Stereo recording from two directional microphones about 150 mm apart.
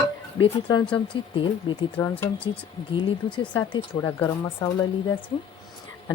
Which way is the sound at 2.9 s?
35° left (ahead or behind).